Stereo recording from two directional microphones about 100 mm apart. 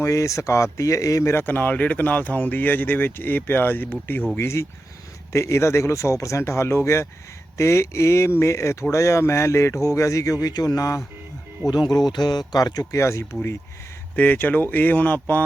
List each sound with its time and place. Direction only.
0.0 s speech: 30° left (ahead or behind)
14.2 s speech: 20° left (ahead or behind)